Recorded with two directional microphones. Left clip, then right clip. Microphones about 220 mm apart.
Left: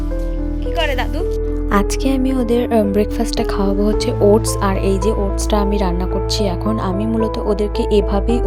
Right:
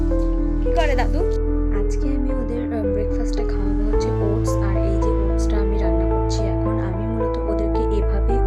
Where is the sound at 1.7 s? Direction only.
40° left (ahead or behind).